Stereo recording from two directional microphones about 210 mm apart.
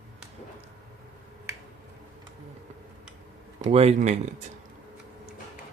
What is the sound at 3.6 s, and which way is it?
Speech, 30° right (ahead or behind).